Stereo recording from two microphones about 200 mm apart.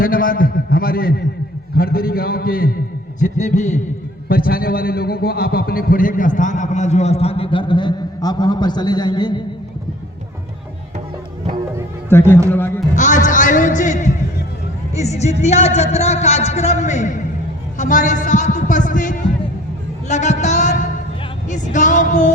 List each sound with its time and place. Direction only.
0.0 s a man's voice: 45° left (ahead or behind)
4.3 s a man's voice: 45° left (ahead or behind); by 9.4 s 20° left (ahead or behind)
12.0 s speech: 10° left (ahead or behind)
13.0 s a man's voice: 40° left (ahead or behind)